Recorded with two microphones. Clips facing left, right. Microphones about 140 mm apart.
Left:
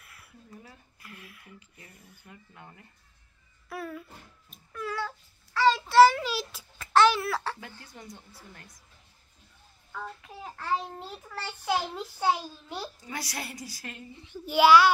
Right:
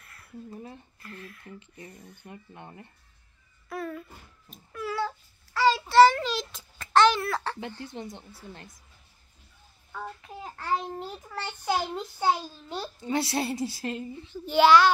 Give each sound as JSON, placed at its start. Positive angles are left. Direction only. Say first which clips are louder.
{"t": 0.0, "sound": "a sound", "louder": "right 1 dB", "side_deg": 10}
{"t": 0.5, "sound": "a woman's voice", "louder": "right 6 dB", "side_deg": -30}
{"t": 0.9, "sound": "a child's voice", "louder": "right 5 dB", "side_deg": 10}
{"t": 1.6, "sound": "speech", "louder": "right 8 dB", "side_deg": -35}
{"t": 2.0, "sound": "a child's voice", "louder": "right 7 dB", "side_deg": 5}
{"t": 2.2, "sound": "a woman's voice", "louder": "right 5 dB", "side_deg": -30}
{"t": 3.6, "sound": "a sound", "louder": "right 3 dB", "side_deg": 5}
{"t": 4.5, "sound": "babbling", "louder": "right 2 dB", "side_deg": -5}
{"t": 7.6, "sound": "a woman's voice", "louder": "right 8 dB", "side_deg": -25}
{"t": 9.9, "sound": "a child's voice", "louder": "right 2 dB", "side_deg": 0}
{"t": 13.0, "sound": "a woman's voice", "louder": "right 10 dB", "side_deg": -25}
{"t": 14.2, "sound": "a child's voice", "louder": "right 1 dB", "side_deg": 10}